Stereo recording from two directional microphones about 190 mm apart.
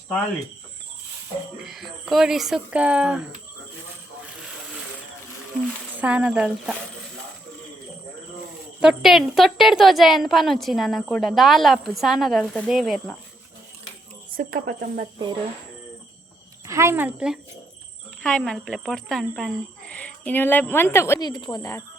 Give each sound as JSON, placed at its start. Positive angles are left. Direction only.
{"t": 1.6, "sound": "speech", "side_deg": 0}
{"t": 6.0, "sound": "speech", "side_deg": -5}
{"t": 8.8, "sound": "speech", "side_deg": 0}
{"t": 14.3, "sound": "speech", "side_deg": -50}
{"t": 16.6, "sound": "a woman's voice", "side_deg": -15}